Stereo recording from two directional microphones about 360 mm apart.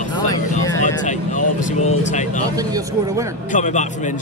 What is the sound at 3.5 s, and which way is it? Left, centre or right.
Speech, centre.